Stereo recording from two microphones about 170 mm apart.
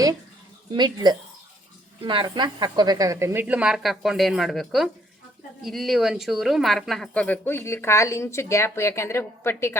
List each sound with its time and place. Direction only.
0.7 s a woman's voice: 25° right (ahead or behind); by 9.7 s 15° left (ahead or behind)